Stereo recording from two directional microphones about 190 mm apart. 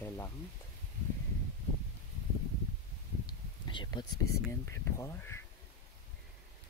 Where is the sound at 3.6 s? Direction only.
25° left (ahead or behind).